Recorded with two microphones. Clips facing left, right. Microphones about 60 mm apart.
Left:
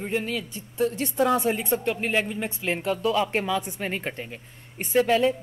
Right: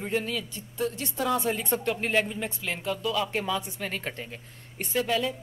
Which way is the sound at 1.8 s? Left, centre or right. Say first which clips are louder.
Left 1 dB; centre.